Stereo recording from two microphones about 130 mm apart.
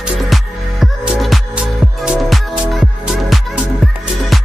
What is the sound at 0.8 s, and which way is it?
Music, centre (ahead or behind).